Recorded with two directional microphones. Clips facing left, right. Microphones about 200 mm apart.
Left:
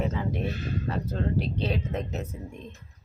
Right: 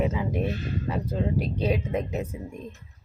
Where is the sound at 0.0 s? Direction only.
10° right (ahead or behind).